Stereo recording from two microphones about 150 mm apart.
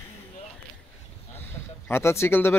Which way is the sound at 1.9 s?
15° left (ahead or behind).